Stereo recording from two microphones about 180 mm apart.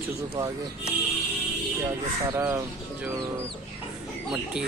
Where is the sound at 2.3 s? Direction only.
15° right (ahead or behind).